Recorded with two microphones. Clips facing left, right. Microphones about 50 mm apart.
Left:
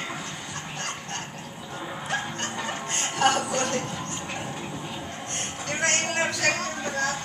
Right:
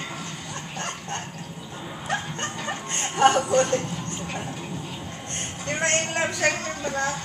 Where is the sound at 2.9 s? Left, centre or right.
Right.